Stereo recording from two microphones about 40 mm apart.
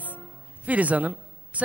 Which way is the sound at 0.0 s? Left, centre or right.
Right.